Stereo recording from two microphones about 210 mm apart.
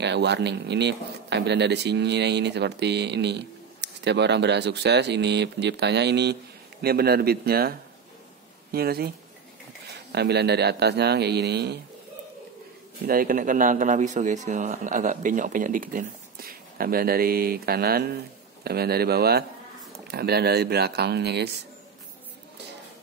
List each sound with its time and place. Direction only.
0.0 s speech: 55° right (ahead or behind)
8.7 s speech: 45° right (ahead or behind)
13.0 s speech: 45° right (ahead or behind)